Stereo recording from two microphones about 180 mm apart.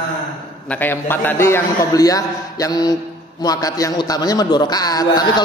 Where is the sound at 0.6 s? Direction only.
10° left (ahead or behind).